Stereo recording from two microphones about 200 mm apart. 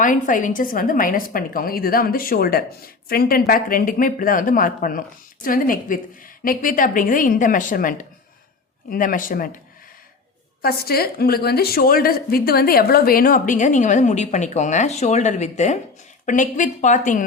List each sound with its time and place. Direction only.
0.0 s a woman's voice: 40° left (ahead or behind)
10.6 s a woman's voice: 50° left (ahead or behind)